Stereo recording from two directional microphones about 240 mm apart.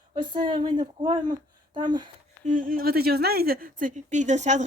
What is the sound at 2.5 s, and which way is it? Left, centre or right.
Speech, right.